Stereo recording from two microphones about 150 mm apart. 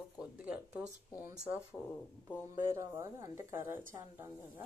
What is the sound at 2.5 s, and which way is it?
Speech, 20° right (ahead or behind).